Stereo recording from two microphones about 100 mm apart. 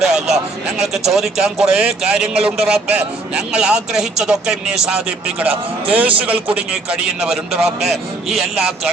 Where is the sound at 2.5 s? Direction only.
15° right (ahead or behind).